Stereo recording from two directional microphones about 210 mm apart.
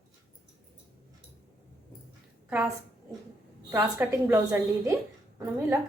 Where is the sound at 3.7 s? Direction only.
10° right (ahead or behind).